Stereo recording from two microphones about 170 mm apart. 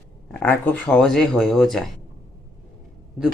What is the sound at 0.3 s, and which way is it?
Speech, 10° left (ahead or behind).